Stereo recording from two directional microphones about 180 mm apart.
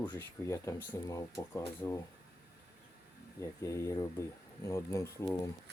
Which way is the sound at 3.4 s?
15° left (ahead or behind).